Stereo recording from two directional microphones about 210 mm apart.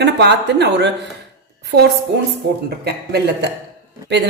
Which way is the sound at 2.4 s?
50° right (ahead or behind).